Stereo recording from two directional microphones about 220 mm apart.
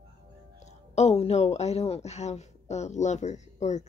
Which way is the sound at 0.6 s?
30° left (ahead or behind).